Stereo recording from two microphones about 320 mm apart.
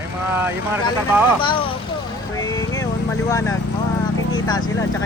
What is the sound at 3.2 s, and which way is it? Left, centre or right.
Speech, centre.